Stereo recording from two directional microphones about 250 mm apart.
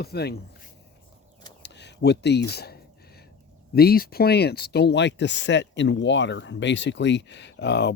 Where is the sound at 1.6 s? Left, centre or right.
Left.